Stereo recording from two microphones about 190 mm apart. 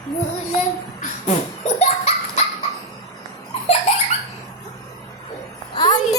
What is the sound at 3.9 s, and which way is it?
Baby laughter, 30° left (ahead or behind).